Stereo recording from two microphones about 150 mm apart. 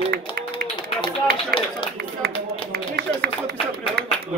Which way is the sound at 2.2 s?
90° right.